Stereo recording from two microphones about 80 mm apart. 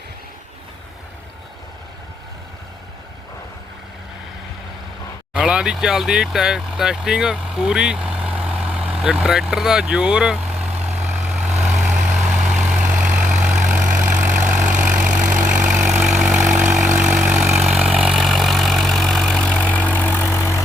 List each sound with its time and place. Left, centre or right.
5.3 s speech: centre
10.8 s vehicle: centre
17.6 s vehicle: centre
19.7 s vehicle: left